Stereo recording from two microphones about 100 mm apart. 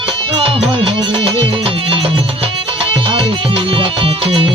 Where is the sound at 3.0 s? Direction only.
65° right (ahead or behind).